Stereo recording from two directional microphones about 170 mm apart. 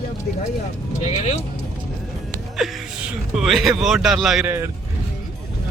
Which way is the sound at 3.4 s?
Centre (ahead or behind).